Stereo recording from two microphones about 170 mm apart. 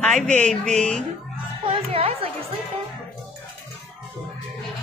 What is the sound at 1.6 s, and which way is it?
Music, 35° right (ahead or behind).